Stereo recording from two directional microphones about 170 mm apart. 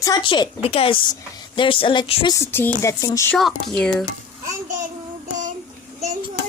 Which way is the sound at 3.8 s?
5° left (ahead or behind).